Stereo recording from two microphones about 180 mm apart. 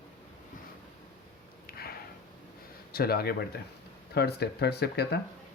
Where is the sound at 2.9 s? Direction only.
60° left (ahead or behind).